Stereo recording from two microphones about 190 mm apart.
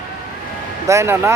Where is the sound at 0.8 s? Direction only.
15° right (ahead or behind).